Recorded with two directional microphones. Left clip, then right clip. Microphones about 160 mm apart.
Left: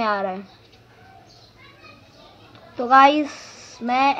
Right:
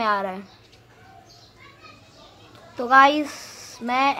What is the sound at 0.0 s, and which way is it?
Speech, 5° right (ahead or behind).